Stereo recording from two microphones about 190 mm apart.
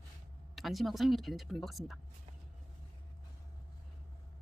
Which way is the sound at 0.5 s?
Centre (ahead or behind).